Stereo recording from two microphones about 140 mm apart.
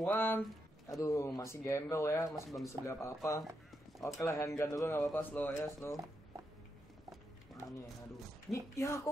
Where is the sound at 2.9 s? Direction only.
20° left (ahead or behind).